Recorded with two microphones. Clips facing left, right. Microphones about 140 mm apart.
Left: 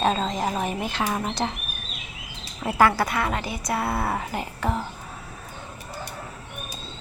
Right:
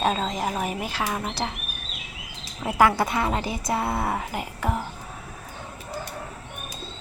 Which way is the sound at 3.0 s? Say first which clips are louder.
Right 1 dB; 25° right (ahead or behind).